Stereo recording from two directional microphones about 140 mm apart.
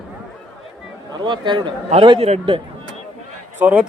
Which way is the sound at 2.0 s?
45° right (ahead or behind).